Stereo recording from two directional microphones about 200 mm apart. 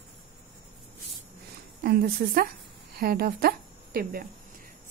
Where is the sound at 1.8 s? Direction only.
50° right (ahead or behind).